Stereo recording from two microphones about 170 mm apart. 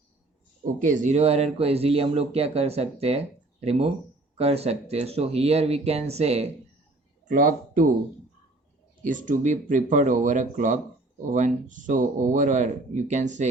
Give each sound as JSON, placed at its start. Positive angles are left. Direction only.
{"t": 0.6, "sound": "speech", "side_deg": -50}
{"t": 7.3, "sound": "speech", "side_deg": -55}
{"t": 9.0, "sound": "speech", "side_deg": -50}